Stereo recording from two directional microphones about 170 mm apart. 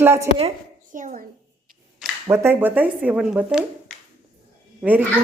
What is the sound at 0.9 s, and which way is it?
Speech, 50° right (ahead or behind).